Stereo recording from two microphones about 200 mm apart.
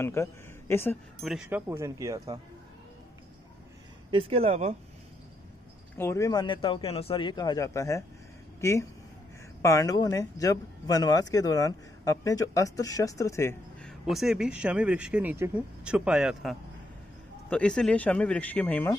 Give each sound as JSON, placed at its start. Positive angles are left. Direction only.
{"t": 0.0, "sound": "speech", "side_deg": 15}
{"t": 1.2, "sound": "speech", "side_deg": -5}
{"t": 4.1, "sound": "speech", "side_deg": -30}
{"t": 5.9, "sound": "a man's voice", "side_deg": 15}